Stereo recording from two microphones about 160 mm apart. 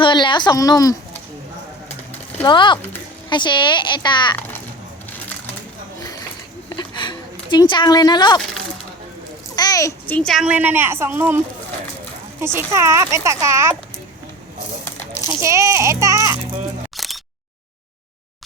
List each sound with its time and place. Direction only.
0.0 s a woman's voice: 30° left (ahead or behind)
2.5 s a woman's voice: 30° left (ahead or behind)
6.7 s a sound: 30° left (ahead or behind)
9.6 s a sound: 20° left (ahead or behind)
10.2 s a woman's voice: 5° left (ahead or behind)
10.4 s a child's voice: 10° right (ahead or behind)
12.5 s a child's voice: 20° right (ahead or behind)
15.3 s a child's voice: 20° right (ahead or behind)
17.0 s single-lens reflex camera: centre (ahead or behind)